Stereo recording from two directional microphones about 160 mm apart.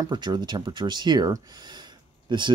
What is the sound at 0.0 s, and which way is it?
Speech, 25° right (ahead or behind).